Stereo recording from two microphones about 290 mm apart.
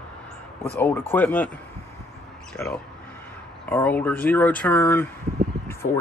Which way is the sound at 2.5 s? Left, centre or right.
Centre.